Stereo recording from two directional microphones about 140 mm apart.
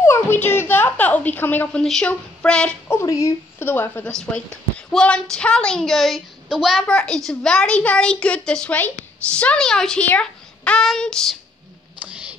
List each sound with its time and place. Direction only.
0.0 s a woman's voice: 15° left (ahead or behind)
3.0 s a woman's voice: 20° left (ahead or behind); by 11.3 s 5° left (ahead or behind)
12.0 s music: 10° right (ahead or behind)